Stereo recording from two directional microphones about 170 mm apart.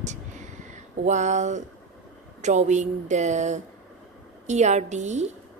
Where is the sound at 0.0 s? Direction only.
45° right (ahead or behind).